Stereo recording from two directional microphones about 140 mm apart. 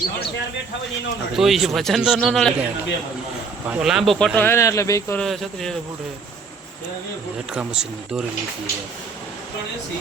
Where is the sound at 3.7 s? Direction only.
5° right (ahead or behind).